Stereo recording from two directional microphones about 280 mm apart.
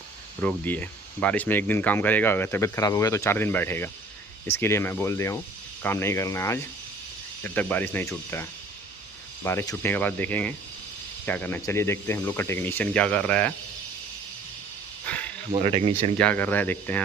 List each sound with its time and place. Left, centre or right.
0.4 s speech: centre
15.0 s cricket: centre
15.5 s speech: right
16.1 s speech: centre